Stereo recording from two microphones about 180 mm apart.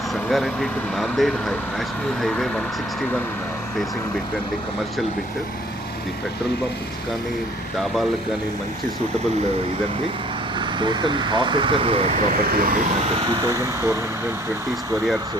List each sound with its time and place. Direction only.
0.3 s speech: centre (ahead or behind)
10.8 s speech: 25° right (ahead or behind)
12.3 s speech: 50° right (ahead or behind)
13.3 s speech: 20° right (ahead or behind)